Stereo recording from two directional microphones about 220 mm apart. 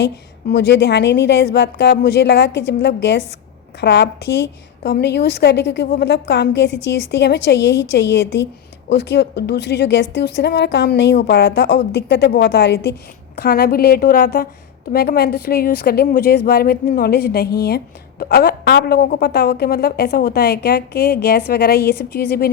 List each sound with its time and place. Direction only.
0.5 s a woman's voice: 50° left (ahead or behind)